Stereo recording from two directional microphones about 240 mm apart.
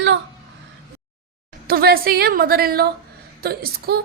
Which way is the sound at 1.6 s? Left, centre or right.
Right.